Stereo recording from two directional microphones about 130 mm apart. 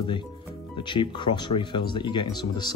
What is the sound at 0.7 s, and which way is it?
Speech, 35° left (ahead or behind).